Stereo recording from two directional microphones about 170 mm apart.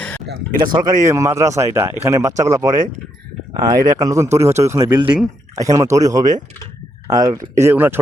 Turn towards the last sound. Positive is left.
turn(degrees=-10)  # may be behind; listen again after turning